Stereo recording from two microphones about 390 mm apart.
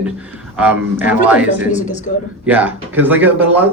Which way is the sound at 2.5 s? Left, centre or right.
Centre.